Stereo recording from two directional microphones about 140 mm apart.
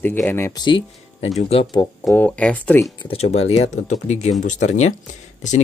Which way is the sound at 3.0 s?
50° left (ahead or behind).